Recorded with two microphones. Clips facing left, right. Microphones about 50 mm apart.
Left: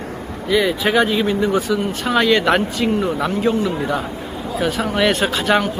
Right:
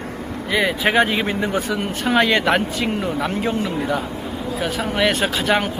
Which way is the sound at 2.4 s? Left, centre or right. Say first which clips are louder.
Left 2 dB; centre.